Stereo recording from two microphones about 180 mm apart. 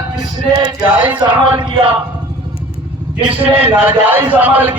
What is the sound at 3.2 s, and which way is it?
Speech, 30° right (ahead or behind).